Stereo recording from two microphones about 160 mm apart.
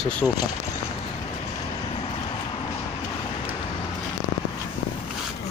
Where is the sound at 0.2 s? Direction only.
5° left (ahead or behind).